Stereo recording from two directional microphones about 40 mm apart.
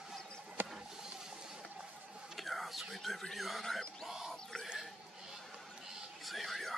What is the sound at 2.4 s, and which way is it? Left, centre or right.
Whispering, centre.